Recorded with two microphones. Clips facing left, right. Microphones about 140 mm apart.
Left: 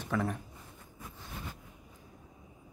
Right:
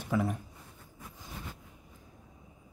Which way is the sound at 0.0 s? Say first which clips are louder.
Right 2 dB; 10° right (ahead or behind).